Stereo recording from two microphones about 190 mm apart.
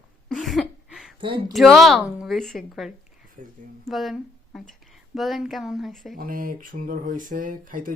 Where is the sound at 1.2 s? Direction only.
25° right (ahead or behind).